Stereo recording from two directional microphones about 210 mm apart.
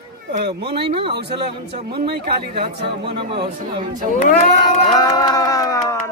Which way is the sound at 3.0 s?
25° right (ahead or behind).